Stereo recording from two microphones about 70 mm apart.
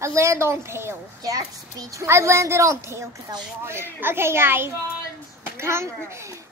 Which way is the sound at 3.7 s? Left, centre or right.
Right.